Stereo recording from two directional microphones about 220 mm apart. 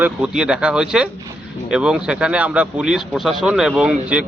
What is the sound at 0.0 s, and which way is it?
Speech, 5° right (ahead or behind).